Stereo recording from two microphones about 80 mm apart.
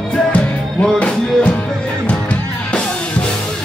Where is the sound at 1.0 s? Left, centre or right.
Centre.